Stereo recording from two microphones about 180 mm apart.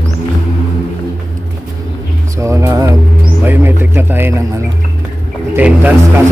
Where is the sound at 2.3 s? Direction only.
15° right (ahead or behind).